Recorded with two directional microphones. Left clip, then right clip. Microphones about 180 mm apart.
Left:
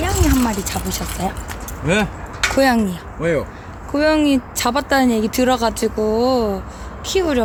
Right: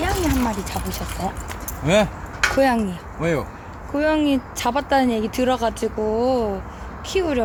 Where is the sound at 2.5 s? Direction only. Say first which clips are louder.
Left 5 dB; 50° left (ahead or behind).